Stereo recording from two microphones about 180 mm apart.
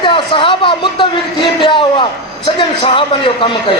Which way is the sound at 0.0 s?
30° left (ahead or behind).